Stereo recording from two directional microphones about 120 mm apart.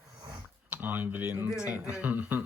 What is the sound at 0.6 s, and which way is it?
A man's voice, 15° right (ahead or behind).